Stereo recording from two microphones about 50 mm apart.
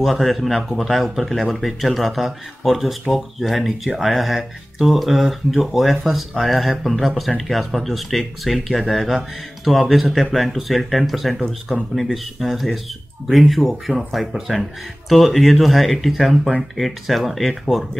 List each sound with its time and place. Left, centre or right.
0.0 s speech: centre